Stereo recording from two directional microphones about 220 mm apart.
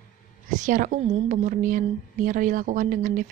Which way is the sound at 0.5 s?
35° right (ahead or behind).